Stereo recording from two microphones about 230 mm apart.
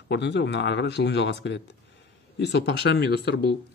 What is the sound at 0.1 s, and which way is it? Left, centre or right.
Speech, left.